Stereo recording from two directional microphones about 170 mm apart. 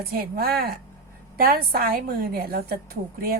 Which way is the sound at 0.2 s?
60° right (ahead or behind).